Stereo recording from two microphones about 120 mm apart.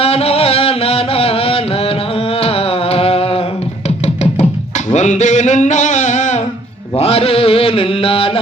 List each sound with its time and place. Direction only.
0.0 s music: 55° left (ahead or behind)
4.9 s a sound: 85° left
6.9 s mantra: 60° left (ahead or behind)